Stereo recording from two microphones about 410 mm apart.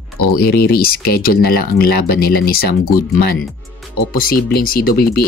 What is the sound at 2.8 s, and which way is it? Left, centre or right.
Speech, left.